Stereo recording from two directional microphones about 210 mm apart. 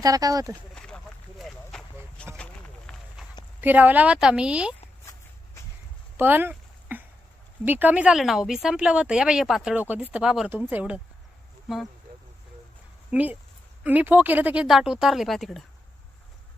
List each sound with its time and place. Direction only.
0.0 s speech: 15° right (ahead or behind)
0.8 s a sound: 5° left (ahead or behind)
2.3 s clip-clop: 5° left (ahead or behind)
3.6 s speech: 10° right (ahead or behind)
6.1 s a sound: 10° right (ahead or behind)
7.6 s speech: 10° right (ahead or behind)
13.1 s speech: 5° right (ahead or behind)